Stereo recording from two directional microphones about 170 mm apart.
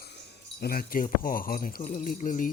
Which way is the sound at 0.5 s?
60° left (ahead or behind).